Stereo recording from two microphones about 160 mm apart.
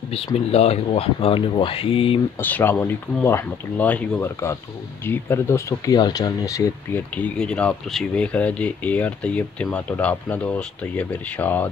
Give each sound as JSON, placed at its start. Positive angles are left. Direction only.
{"t": 0.1, "sound": "speech", "side_deg": 40}
{"t": 2.3, "sound": "speech", "side_deg": 15}
{"t": 7.2, "sound": "speech", "side_deg": 5}